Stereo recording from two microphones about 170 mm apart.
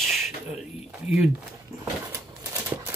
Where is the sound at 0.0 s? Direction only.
Centre (ahead or behind).